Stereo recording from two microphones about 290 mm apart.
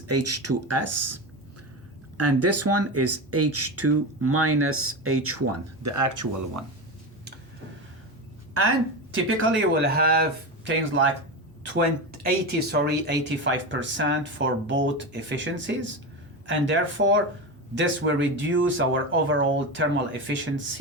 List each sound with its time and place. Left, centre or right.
0.1 s speech: right
9.1 s speech: right
10.6 s speech: right
12.2 s speech: right